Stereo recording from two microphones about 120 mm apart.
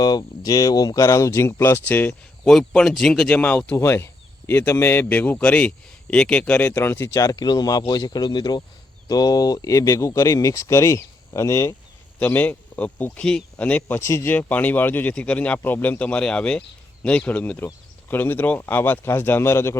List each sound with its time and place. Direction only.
0.0 s a man's voice: 35° left (ahead or behind); by 2.5 s 15° left (ahead or behind)
2.5 s a man's voice: centre (ahead or behind); by 11.7 s 25° left (ahead or behind)
12.2 s a man's voice: 15° left (ahead or behind)